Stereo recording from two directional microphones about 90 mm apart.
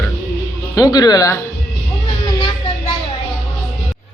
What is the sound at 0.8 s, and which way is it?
Speech, 45° left (ahead or behind).